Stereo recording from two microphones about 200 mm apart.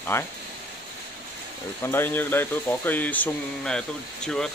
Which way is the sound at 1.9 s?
10° left (ahead or behind).